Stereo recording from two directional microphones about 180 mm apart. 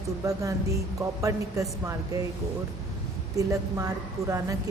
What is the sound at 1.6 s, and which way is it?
Speech, 20° right (ahead or behind).